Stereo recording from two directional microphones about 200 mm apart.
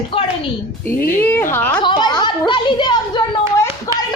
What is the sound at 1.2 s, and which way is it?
Speech, 10° left (ahead or behind).